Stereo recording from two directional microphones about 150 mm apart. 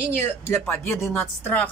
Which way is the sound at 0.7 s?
15° left (ahead or behind).